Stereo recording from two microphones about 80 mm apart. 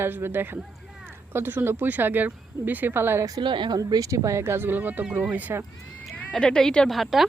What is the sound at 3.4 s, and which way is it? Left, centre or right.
Speech, right.